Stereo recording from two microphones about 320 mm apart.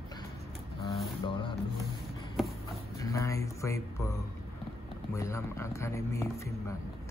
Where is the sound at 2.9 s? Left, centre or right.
Centre.